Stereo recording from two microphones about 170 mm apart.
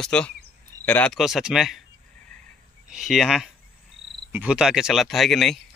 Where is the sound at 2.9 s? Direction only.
Centre (ahead or behind).